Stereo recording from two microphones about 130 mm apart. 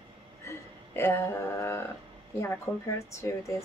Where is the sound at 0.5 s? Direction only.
20° left (ahead or behind).